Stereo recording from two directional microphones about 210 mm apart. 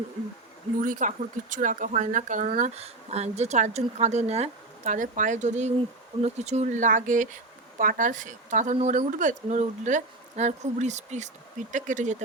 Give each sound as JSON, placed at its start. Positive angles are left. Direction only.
{"t": 0.8, "sound": "speech", "side_deg": -40}